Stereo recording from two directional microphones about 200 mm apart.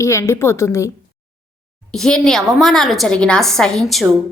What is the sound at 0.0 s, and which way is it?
Speech, 15° left (ahead or behind).